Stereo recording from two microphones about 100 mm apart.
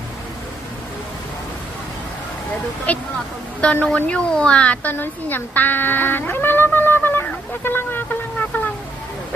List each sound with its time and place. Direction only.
2.9 s a woman's voice: 15° left (ahead or behind)